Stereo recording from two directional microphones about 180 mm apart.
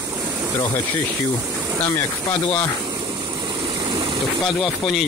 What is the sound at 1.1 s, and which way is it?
Speech, 15° right (ahead or behind).